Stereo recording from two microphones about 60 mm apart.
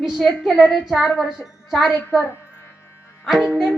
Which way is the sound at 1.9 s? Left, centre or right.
Left.